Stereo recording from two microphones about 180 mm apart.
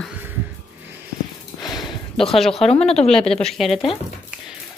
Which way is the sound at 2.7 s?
35° left (ahead or behind).